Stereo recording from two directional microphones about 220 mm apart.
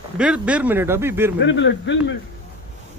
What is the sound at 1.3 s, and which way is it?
Speech, 55° left (ahead or behind).